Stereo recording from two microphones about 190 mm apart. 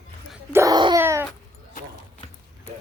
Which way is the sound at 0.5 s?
20° right (ahead or behind).